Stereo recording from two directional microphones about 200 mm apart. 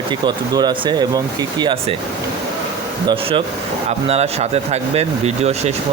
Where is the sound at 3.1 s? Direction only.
25° right (ahead or behind).